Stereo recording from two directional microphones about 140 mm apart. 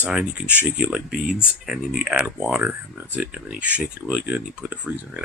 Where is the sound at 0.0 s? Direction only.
5° right (ahead or behind).